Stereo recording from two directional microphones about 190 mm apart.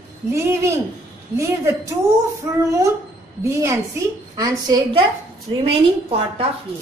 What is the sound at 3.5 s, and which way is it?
A woman's voice, 15° right (ahead or behind).